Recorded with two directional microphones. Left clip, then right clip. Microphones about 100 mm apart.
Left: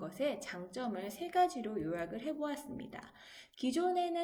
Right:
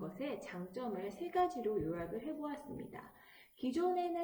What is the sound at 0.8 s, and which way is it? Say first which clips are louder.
A woman's voice: left 1 dB; 20° left (ahead or behind).